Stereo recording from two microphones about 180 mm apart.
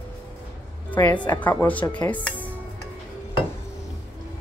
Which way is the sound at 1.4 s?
10° left (ahead or behind).